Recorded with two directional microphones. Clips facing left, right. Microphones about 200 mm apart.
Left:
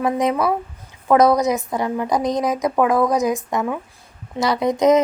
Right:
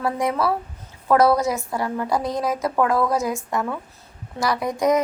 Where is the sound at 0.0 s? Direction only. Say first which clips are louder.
Left 3 dB; 20° left (ahead or behind).